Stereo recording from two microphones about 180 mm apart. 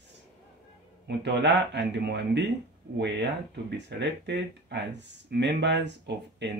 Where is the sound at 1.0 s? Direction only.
70° right (ahead or behind).